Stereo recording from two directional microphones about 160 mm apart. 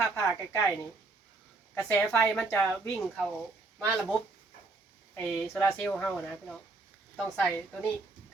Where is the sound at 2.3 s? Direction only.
5° left (ahead or behind).